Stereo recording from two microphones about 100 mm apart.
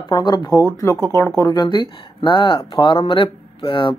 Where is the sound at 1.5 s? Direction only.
45° left (ahead or behind).